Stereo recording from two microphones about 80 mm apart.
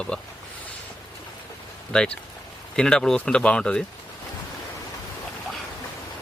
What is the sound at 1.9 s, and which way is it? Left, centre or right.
A man's voice, centre.